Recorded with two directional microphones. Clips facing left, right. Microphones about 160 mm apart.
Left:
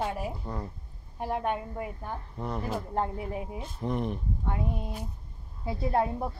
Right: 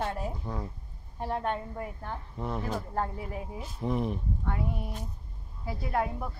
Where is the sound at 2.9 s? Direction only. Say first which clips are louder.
Left 2 dB; 20° left (ahead or behind).